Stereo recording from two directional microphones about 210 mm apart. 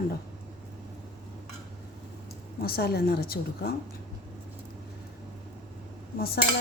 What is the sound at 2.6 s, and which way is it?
Speech, 45° left (ahead or behind).